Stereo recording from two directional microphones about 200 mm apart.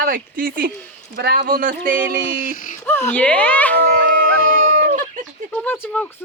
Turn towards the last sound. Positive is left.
turn(degrees=10)  # may be behind; listen again after turning